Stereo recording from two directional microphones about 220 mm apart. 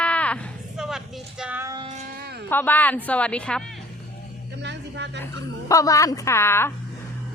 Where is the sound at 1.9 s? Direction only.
45° right (ahead or behind).